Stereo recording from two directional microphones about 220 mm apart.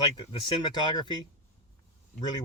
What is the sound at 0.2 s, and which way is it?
Speech, 20° left (ahead or behind).